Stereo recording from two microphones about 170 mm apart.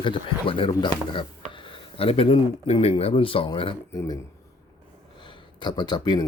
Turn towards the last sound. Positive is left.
turn(degrees=25)  # may be behind; listen again after turning